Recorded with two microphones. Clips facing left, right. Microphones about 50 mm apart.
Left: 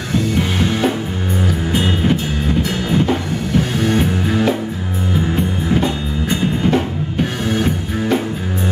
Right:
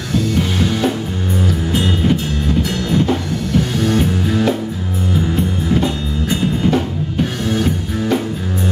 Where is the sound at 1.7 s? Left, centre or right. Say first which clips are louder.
Even; centre.